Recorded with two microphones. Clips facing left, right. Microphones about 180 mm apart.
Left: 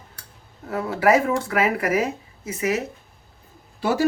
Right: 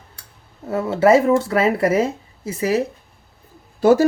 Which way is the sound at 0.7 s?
25° right (ahead or behind).